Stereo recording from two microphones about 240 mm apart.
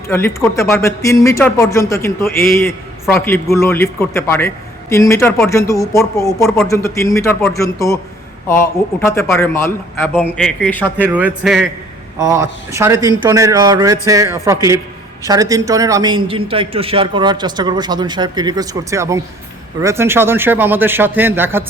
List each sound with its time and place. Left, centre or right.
0.1 s a man's voice: centre
9.0 s a man's voice: centre
10.9 s a man's voice: centre